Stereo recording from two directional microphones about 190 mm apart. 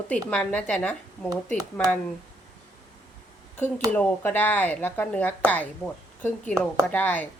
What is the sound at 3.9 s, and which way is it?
Speech, 10° left (ahead or behind).